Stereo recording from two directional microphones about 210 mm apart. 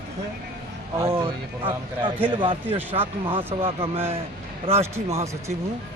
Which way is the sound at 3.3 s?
25° right (ahead or behind).